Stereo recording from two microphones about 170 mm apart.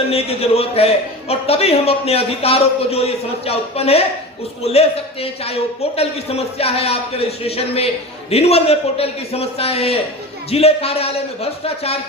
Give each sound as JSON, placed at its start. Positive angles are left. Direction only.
{"t": 0.1, "sound": "a man's voice", "side_deg": 35}